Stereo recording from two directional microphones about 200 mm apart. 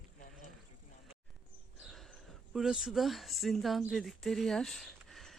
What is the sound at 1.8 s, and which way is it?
Speech, centre (ahead or behind).